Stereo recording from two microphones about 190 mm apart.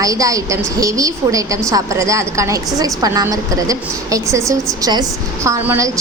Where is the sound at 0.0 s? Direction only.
20° right (ahead or behind).